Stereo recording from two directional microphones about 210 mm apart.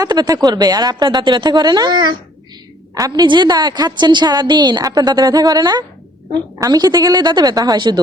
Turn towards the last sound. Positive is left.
turn(degrees=-20)  # may be behind; listen again after turning